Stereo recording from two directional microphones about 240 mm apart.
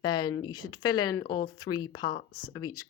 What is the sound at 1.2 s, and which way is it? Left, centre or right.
Speech, left.